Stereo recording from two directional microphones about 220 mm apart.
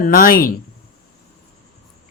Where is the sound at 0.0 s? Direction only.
40° left (ahead or behind).